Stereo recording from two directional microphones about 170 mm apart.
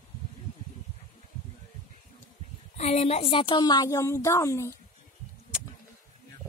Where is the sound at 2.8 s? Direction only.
40° left (ahead or behind); by 4.7 s 15° left (ahead or behind).